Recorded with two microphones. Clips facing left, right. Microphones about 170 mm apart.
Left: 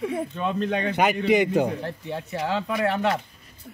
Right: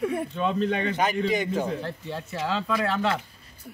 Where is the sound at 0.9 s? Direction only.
70° left (ahead or behind).